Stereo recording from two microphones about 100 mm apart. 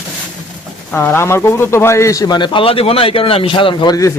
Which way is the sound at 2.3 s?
55° left (ahead or behind).